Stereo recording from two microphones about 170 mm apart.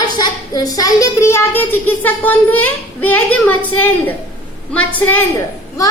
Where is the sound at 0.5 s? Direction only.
20° left (ahead or behind).